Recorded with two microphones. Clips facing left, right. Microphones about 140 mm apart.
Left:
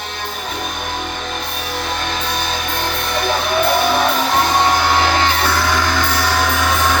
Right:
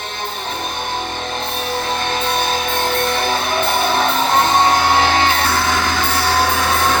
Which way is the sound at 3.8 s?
25° right (ahead or behind).